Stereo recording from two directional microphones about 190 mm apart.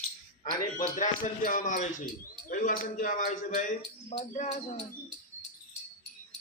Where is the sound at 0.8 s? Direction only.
45° left (ahead or behind).